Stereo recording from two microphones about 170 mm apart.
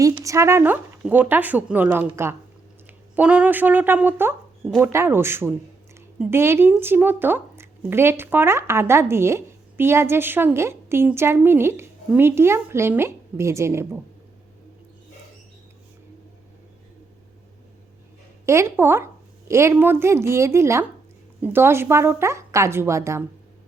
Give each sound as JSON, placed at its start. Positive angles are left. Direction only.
{"t": 0.0, "sound": "speech", "side_deg": -20}
{"t": 18.4, "sound": "speech", "side_deg": -15}